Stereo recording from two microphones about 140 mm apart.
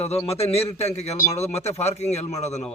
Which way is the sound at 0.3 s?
45° left (ahead or behind).